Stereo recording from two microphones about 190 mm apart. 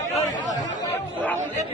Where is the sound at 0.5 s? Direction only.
20° left (ahead or behind).